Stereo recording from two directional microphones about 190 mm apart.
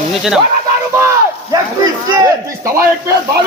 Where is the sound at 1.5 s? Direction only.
20° right (ahead or behind).